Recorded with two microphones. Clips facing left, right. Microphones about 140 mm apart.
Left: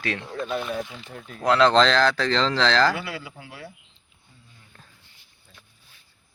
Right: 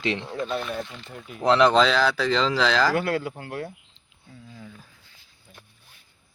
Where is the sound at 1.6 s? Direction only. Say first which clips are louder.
Left 1 dB; 5° right (ahead or behind).